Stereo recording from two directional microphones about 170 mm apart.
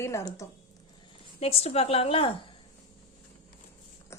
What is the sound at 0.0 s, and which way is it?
Speech, 15° left (ahead or behind).